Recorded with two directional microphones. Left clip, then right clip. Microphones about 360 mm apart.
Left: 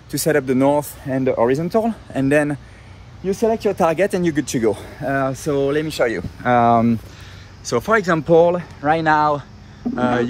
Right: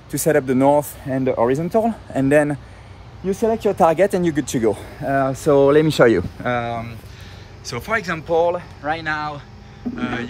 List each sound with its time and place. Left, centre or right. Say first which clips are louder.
0.1 s speech: even; centre
6.4 s speech: left 8 dB; centre
8.3 s speech: left 3 dB; centre